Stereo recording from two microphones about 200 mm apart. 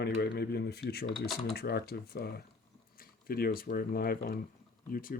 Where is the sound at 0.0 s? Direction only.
50° left (ahead or behind).